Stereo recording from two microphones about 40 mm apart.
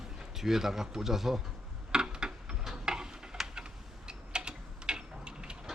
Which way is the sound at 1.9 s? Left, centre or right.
Centre.